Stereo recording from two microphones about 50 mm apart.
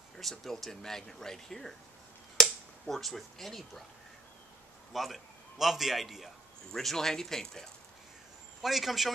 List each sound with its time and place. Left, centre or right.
0.2 s speech: centre
2.9 s speech: centre
4.9 s a man's voice: centre
8.6 s speech: centre